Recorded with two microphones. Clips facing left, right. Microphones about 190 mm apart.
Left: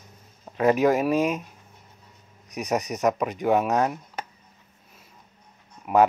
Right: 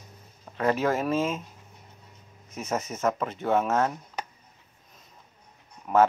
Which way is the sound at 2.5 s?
15° left (ahead or behind).